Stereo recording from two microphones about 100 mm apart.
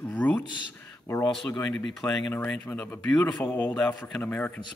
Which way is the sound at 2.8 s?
10° left (ahead or behind).